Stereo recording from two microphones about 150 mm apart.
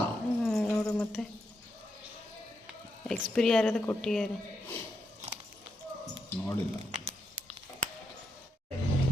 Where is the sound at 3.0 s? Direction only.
5° left (ahead or behind).